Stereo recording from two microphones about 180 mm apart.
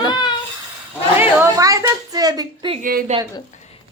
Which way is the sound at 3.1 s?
40° right (ahead or behind).